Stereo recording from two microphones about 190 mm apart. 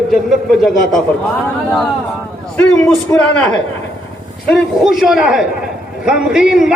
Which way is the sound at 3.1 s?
5° left (ahead or behind).